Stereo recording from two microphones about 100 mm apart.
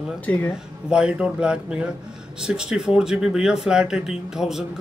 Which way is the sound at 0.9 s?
10° right (ahead or behind).